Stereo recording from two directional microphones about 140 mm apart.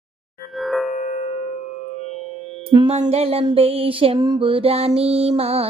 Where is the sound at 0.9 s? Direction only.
60° left (ahead or behind).